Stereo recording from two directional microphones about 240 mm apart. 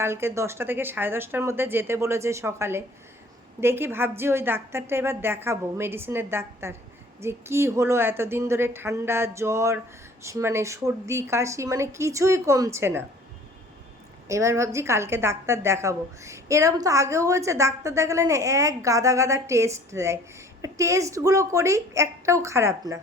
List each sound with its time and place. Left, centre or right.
0.0 s a woman's voice: centre
14.3 s a woman's voice: centre